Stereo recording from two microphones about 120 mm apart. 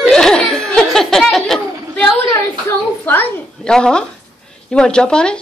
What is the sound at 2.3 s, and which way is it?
A woman's voice, 20° left (ahead or behind).